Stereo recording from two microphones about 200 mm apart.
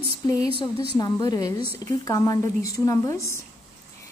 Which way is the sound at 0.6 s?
20° left (ahead or behind).